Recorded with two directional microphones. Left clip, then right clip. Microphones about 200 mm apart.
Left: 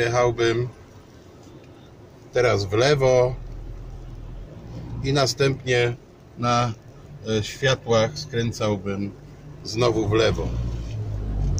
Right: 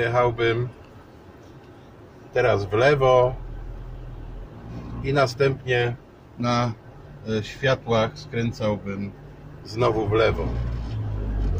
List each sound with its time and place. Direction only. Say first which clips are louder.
0.0 s a man's voice: left 1 dB; 25° left (ahead or behind)
2.3 s speech: even; 30° left (ahead or behind)
5.0 s speech: right 1 dB; 30° left (ahead or behind)
6.4 s speech: left 2 dB; 50° left (ahead or behind)
9.7 s a man's voice: left 1 dB; 25° left (ahead or behind)